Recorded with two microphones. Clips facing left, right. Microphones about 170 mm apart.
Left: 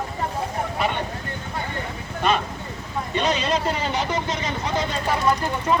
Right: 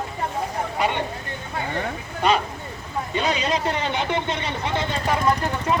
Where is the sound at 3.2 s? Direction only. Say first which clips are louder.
Left 1 dB; 15° right (ahead or behind).